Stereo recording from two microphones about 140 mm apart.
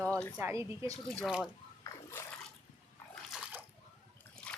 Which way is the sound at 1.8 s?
20° left (ahead or behind).